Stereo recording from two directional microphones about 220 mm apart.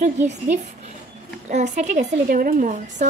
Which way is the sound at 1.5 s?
30° right (ahead or behind).